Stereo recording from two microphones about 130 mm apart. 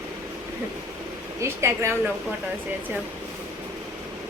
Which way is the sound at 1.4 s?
20° right (ahead or behind).